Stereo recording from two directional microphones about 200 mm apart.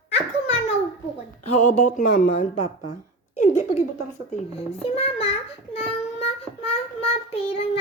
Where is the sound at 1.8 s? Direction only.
40° left (ahead or behind).